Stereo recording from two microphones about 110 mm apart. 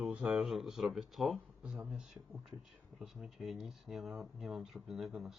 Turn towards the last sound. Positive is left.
turn(degrees=0)  # may be behind; listen again after turning